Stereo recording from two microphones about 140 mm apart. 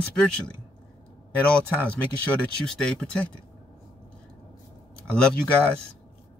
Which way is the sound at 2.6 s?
5° left (ahead or behind).